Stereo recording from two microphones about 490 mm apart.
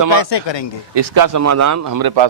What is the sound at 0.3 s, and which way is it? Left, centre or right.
Speech, left.